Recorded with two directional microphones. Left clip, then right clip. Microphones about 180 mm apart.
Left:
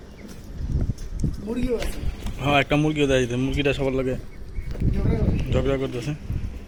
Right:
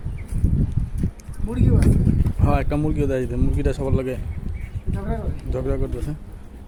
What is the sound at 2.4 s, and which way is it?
Speech, 5° right (ahead or behind).